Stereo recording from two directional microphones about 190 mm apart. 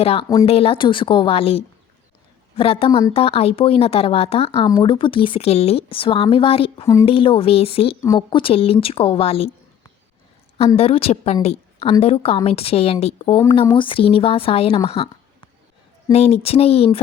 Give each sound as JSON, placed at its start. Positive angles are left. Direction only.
{"t": 0.0, "sound": "speech", "side_deg": 30}
{"t": 10.8, "sound": "speech", "side_deg": 30}
{"t": 11.4, "sound": "a sound", "side_deg": 35}
{"t": 12.0, "sound": "speech", "side_deg": 30}
{"t": 14.8, "sound": "a sound", "side_deg": 30}
{"t": 16.1, "sound": "speech", "side_deg": 30}